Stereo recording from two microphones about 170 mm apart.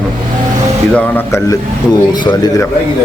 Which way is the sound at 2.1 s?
25° left (ahead or behind).